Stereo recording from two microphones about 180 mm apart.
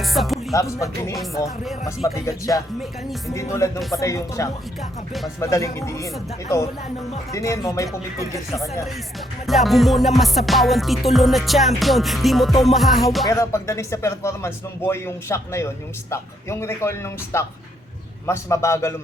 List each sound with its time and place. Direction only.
0.0 s music: centre (ahead or behind)
0.5 s speech: 15° left (ahead or behind)
1.1 s music: centre (ahead or behind)
2.0 s speech: 15° left (ahead or behind)
3.2 s speech: 15° left (ahead or behind)
4.8 s music: centre (ahead or behind)
5.4 s speech: 15° left (ahead or behind)
7.3 s speech: 15° left (ahead or behind)
9.5 s music: centre (ahead or behind)
13.2 s speech: 15° left (ahead or behind)